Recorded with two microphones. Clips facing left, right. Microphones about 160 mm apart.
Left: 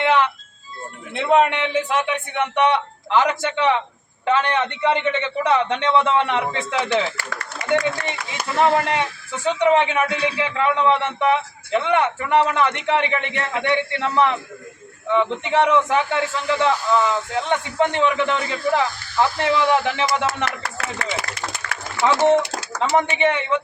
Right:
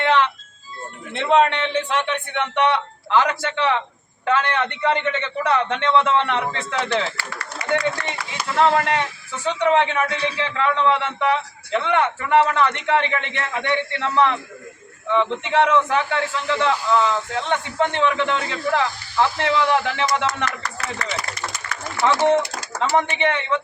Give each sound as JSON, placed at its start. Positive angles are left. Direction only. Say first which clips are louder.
{"t": 0.0, "sound": "music", "louder": "even", "side_deg": 10}
{"t": 1.1, "sound": "a man's voice", "louder": "even", "side_deg": 10}
{"t": 7.3, "sound": "a sound", "louder": "left 2 dB", "side_deg": 50}
{"t": 8.5, "sound": "a man's voice", "louder": "even", "side_deg": 15}
{"t": 22.8, "sound": "a man's voice", "louder": "left 1 dB", "side_deg": 15}